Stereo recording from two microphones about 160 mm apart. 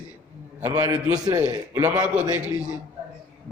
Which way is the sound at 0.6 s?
15° right (ahead or behind).